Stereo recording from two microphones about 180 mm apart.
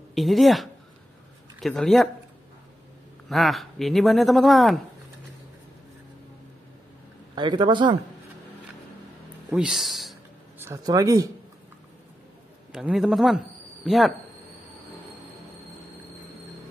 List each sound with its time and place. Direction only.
0.1 s speech: centre (ahead or behind)
3.3 s speech: centre (ahead or behind)
7.3 s speech: 25° right (ahead or behind)
9.5 s speech: 5° right (ahead or behind)
10.6 s speech: 20° right (ahead or behind)
12.7 s speech: centre (ahead or behind)